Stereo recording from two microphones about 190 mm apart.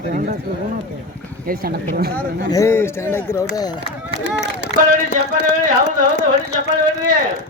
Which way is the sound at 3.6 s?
20° left (ahead or behind).